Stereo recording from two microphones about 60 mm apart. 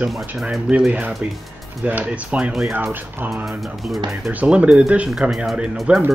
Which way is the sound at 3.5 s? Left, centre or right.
Centre.